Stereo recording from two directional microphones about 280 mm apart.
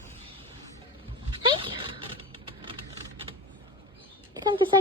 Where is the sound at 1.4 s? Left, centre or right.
Centre.